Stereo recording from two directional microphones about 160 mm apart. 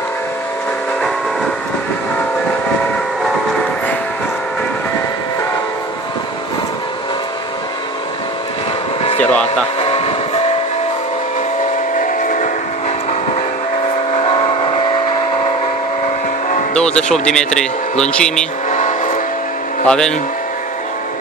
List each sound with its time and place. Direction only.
9.2 s vehicle: 10° left (ahead or behind)
9.8 s vehicle: 40° left (ahead or behind)
12.0 s train: 55° left (ahead or behind)
14.1 s vehicle: 40° left (ahead or behind)
16.7 s a man's voice: 5° left (ahead or behind)
18.7 s vehicle: 50° left (ahead or behind)
19.9 s a man's voice: 5° left (ahead or behind)